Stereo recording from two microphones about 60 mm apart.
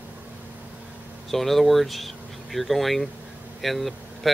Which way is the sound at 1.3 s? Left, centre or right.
Centre.